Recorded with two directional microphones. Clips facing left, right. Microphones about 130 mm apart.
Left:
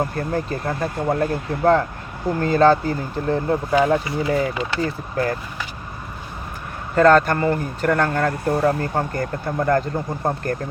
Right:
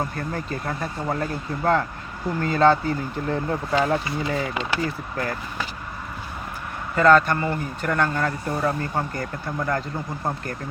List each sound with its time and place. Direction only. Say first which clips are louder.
0.0 s speech: left 5 dB; 35° left (ahead or behind)
6.9 s speech: left 3 dB; 45° left (ahead or behind)